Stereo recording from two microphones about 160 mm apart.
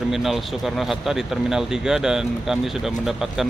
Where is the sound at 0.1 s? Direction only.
Centre (ahead or behind).